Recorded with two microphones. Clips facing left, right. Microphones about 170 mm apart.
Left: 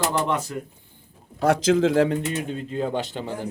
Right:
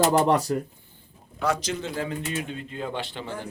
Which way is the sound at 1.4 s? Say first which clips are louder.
Left 9 dB; 90° left.